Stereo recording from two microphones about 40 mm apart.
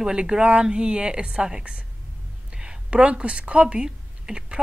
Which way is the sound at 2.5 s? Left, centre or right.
Centre.